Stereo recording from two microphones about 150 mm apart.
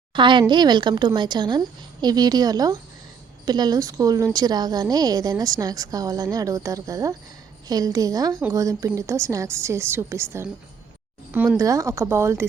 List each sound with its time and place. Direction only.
0.1 s a woman's voice: 30° right (ahead or behind)
11.5 s a woman's voice: 20° right (ahead or behind)